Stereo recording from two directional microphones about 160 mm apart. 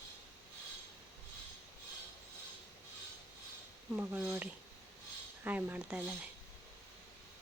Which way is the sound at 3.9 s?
10° right (ahead or behind).